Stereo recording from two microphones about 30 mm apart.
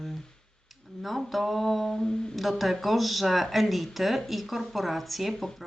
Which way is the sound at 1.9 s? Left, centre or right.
Left.